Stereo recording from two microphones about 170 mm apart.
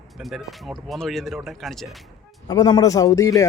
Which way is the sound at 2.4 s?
25° left (ahead or behind).